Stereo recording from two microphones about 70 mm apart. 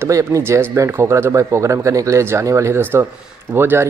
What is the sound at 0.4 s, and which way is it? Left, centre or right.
Speech, right.